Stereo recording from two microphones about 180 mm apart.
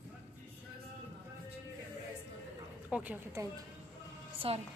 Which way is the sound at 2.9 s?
10° right (ahead or behind).